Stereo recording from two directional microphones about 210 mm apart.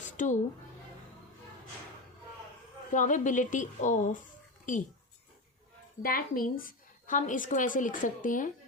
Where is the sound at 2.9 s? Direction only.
35° left (ahead or behind).